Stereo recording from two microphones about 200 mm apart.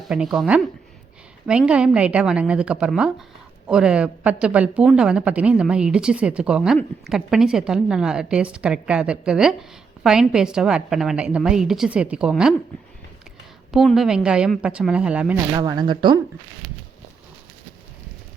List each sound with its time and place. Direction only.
0.1 s speech: 5° right (ahead or behind)
13.7 s speech: centre (ahead or behind)
15.5 s speech: 20° right (ahead or behind)